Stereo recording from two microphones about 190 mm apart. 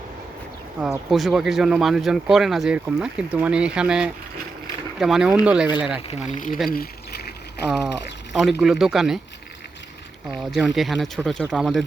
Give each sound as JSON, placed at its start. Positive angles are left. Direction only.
{"t": 0.8, "sound": "speech", "side_deg": 0}
{"t": 6.0, "sound": "speech", "side_deg": 35}
{"t": 6.3, "sound": "speech", "side_deg": 45}
{"t": 6.7, "sound": "a sound", "side_deg": 55}
{"t": 8.3, "sound": "speech", "side_deg": 0}
{"t": 10.2, "sound": "speech", "side_deg": 0}